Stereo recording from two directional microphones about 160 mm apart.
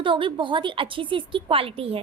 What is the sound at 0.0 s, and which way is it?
A woman's voice, 30° right (ahead or behind).